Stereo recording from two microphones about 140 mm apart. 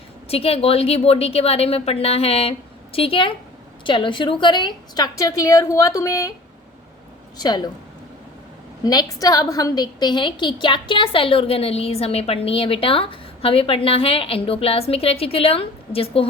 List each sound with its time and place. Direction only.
0.3 s a woman's voice: 45° left (ahead or behind); by 6.3 s 25° left (ahead or behind)
7.3 s a woman's voice: 30° left (ahead or behind)
8.8 s a woman's voice: 30° left (ahead or behind)